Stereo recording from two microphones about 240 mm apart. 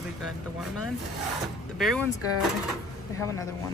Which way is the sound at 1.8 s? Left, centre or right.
Centre.